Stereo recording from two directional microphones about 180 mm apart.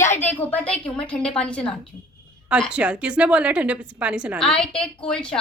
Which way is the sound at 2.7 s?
5° right (ahead or behind).